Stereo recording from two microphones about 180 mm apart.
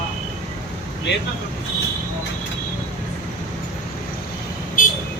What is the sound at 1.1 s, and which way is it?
Speech, 75° left (ahead or behind).